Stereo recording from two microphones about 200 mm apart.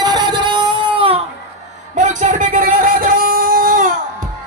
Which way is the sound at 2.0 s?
40° right (ahead or behind).